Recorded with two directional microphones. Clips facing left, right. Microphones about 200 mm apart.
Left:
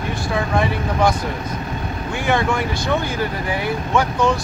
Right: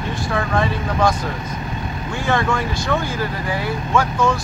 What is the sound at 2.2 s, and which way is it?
Speech, 15° left (ahead or behind).